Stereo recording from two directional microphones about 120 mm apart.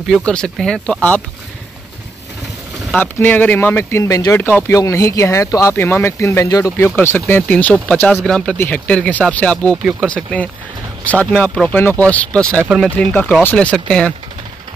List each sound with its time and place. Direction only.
0.1 s speech: 5° left (ahead or behind)
2.9 s speech: 15° left (ahead or behind)